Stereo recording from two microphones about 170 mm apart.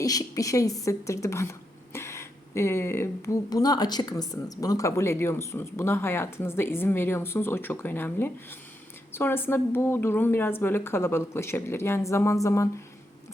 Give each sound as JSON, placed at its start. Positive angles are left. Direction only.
{"t": 0.0, "sound": "speech", "side_deg": 20}